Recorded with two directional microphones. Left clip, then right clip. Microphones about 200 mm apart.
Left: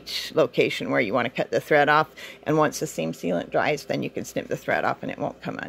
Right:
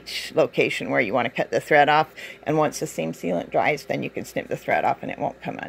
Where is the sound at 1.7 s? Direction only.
50° left (ahead or behind).